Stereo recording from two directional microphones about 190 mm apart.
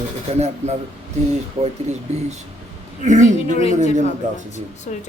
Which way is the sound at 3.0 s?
40° right (ahead or behind).